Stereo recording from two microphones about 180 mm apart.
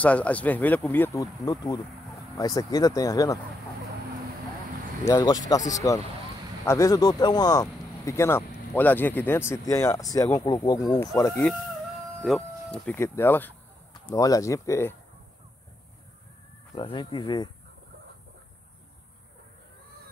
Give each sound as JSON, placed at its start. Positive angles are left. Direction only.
{"t": 0.0, "sound": "speech", "side_deg": 10}
{"t": 5.0, "sound": "speech", "side_deg": 20}
{"t": 12.2, "sound": "speech", "side_deg": 0}
{"t": 16.7, "sound": "speech", "side_deg": 25}